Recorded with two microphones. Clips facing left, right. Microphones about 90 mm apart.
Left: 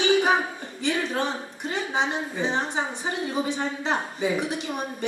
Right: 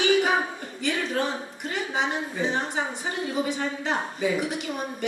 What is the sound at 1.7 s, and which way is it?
Speech, 25° left (ahead or behind).